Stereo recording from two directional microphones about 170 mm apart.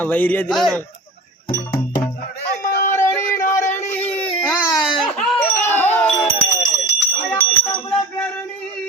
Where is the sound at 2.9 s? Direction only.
15° left (ahead or behind).